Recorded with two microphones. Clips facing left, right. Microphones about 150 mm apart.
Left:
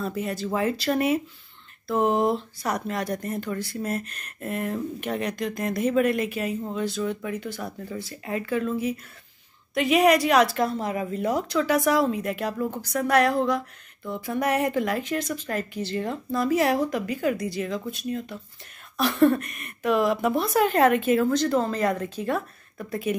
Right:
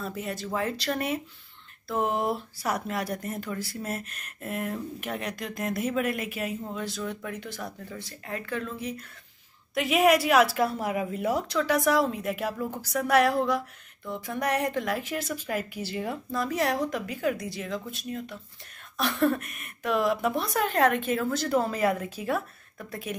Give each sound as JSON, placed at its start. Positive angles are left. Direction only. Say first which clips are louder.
{"t": 0.0, "sound": "speech", "louder": "left 5 dB", "side_deg": 0}